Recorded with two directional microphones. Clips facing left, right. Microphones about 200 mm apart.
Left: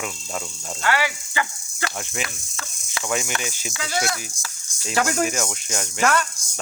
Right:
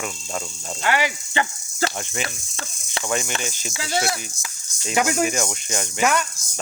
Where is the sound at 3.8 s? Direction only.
25° right (ahead or behind).